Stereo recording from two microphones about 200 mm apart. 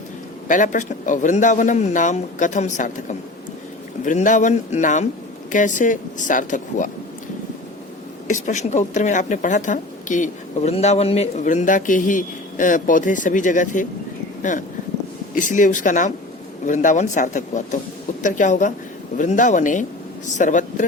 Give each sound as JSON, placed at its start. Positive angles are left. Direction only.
{"t": 0.4, "sound": "a woman's voice", "side_deg": 40}
{"t": 8.3, "sound": "a woman's voice", "side_deg": 35}